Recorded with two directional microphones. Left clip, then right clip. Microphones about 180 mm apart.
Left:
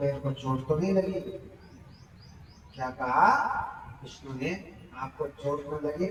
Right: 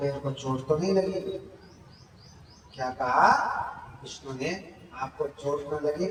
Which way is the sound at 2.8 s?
20° right (ahead or behind).